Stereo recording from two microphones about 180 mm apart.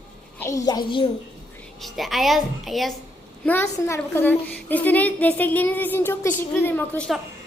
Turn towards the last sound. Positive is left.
turn(degrees=10)  # may be behind; listen again after turning